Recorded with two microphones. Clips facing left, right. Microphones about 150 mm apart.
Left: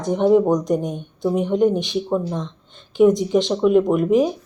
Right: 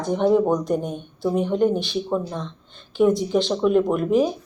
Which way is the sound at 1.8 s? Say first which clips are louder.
Left 2 dB; 20° left (ahead or behind).